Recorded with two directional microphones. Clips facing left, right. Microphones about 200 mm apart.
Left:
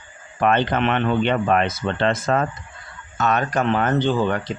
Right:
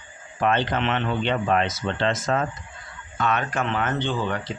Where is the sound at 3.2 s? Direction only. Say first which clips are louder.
Left 4 dB; 40° left (ahead or behind).